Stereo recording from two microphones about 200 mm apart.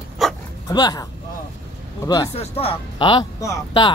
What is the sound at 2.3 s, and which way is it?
Speech, 30° left (ahead or behind).